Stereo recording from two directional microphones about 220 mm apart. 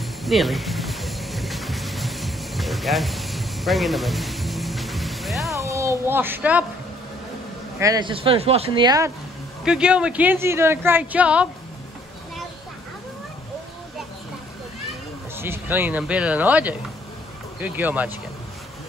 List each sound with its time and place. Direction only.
0.0 s music: centre (ahead or behind)
5.6 s speech: 15° right (ahead or behind)
7.8 s speech: 20° right (ahead or behind)
9.7 s speech: 5° right (ahead or behind)
15.3 s speech: 10° right (ahead or behind)